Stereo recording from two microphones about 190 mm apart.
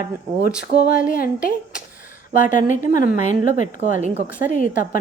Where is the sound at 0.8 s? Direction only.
50° left (ahead or behind).